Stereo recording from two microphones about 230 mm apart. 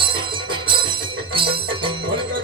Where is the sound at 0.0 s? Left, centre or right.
Right.